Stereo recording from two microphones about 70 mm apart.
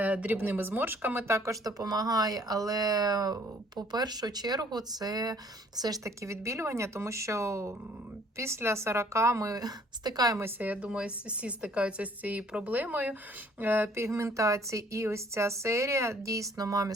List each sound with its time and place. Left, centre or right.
0.0 s speech: right
1.3 s speech: right
6.1 s speech: right
10.6 s speech: centre
14.0 s speech: right